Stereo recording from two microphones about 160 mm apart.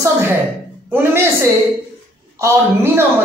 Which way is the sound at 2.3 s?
15° right (ahead or behind).